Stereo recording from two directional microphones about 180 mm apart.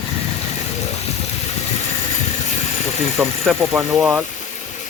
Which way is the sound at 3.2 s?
5° right (ahead or behind).